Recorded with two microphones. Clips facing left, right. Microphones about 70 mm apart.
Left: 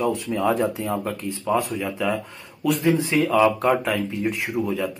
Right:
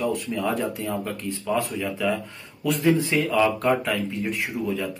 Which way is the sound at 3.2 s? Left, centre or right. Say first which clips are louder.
Left 3 dB; centre.